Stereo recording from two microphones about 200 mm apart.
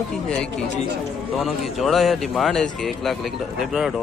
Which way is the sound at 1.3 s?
Centre (ahead or behind).